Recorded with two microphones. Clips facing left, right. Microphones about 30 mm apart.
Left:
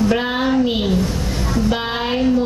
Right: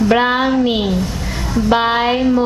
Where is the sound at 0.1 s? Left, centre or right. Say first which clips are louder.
Right 6 dB; right.